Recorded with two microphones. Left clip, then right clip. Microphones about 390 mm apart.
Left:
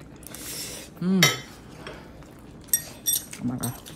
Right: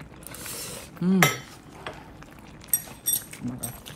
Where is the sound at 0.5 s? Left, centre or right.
Centre.